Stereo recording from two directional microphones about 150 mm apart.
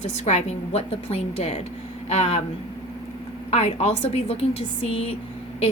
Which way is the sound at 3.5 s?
45° left (ahead or behind).